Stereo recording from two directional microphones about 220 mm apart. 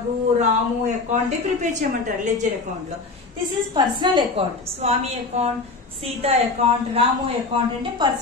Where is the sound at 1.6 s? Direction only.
35° right (ahead or behind).